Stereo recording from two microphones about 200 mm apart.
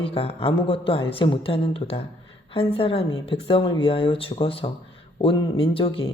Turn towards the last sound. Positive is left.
turn(degrees=25)  # may be behind; listen again after turning